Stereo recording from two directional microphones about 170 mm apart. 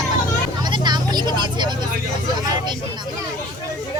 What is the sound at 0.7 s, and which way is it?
Vehicle, 25° right (ahead or behind).